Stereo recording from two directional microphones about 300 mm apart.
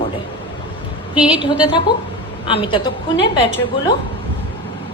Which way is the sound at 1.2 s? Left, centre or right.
Centre.